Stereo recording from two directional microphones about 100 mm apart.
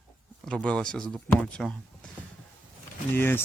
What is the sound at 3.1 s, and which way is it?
Speech, 20° left (ahead or behind).